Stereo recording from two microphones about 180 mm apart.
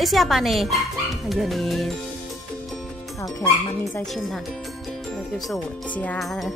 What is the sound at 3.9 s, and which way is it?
Speech, centre (ahead or behind).